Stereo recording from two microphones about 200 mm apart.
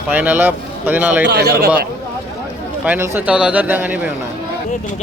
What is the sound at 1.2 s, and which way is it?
Speech, 55° right (ahead or behind).